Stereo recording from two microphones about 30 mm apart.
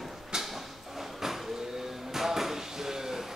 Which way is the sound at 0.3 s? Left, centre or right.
Centre.